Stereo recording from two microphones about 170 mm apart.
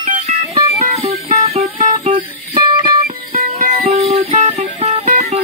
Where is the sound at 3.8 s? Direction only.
35° right (ahead or behind).